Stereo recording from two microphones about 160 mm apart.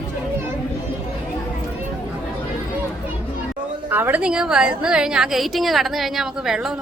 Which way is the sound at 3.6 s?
55° right (ahead or behind).